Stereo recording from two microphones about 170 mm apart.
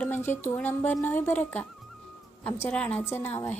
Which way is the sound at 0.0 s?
10° left (ahead or behind).